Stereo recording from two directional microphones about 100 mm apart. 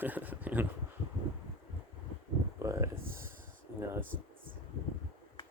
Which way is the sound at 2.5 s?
30° right (ahead or behind).